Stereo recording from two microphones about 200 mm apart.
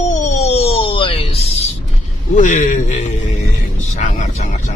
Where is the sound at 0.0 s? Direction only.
35° left (ahead or behind).